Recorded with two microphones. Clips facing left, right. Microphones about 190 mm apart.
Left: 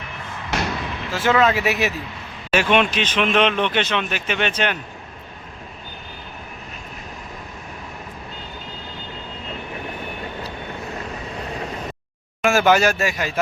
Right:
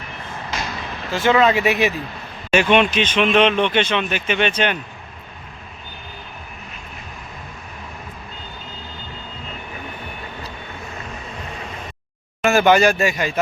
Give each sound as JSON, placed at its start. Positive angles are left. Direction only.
{"t": 0.5, "sound": "vehicle", "side_deg": 70}
{"t": 1.1, "sound": "speech", "side_deg": 5}
{"t": 12.4, "sound": "speech", "side_deg": 5}